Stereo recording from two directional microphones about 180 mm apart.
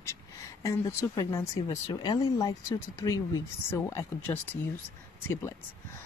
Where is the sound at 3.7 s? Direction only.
15° left (ahead or behind).